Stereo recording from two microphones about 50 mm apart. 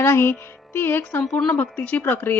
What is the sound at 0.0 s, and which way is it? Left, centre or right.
Speech, left.